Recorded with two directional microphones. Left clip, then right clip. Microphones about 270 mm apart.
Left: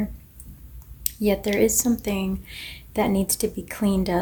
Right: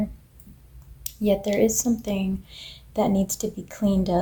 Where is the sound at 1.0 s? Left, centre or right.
Left.